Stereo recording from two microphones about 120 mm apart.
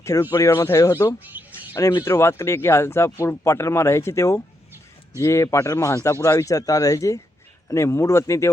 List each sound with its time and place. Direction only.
0.0 s speech: 25° left (ahead or behind)
1.2 s bird: 15° right (ahead or behind)
1.7 s speech: 25° left (ahead or behind)